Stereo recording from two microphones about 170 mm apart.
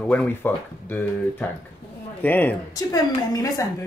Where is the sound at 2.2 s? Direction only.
10° left (ahead or behind).